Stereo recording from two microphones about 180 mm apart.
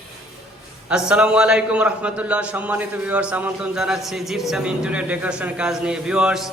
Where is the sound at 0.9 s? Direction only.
5° right (ahead or behind).